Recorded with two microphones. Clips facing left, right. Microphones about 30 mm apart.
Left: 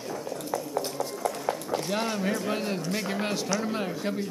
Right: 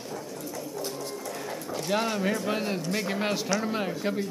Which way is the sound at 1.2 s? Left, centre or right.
Centre.